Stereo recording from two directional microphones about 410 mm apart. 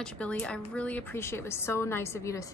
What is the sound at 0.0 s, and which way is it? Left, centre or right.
A woman's voice, centre.